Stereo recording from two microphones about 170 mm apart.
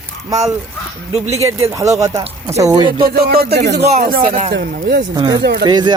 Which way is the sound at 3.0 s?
65° right (ahead or behind).